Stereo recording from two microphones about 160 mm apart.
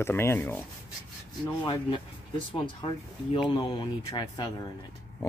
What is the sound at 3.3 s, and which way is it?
Speech, 30° left (ahead or behind).